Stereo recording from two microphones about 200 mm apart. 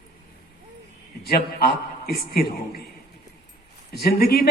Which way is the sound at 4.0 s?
50° left (ahead or behind).